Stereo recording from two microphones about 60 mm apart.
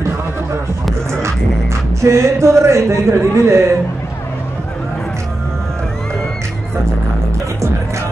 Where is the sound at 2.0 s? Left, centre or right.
Right.